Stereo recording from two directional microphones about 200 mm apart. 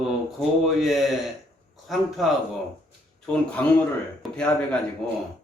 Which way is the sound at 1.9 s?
Centre (ahead or behind).